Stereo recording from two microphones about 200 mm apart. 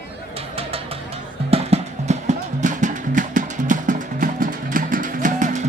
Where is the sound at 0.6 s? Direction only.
30° right (ahead or behind).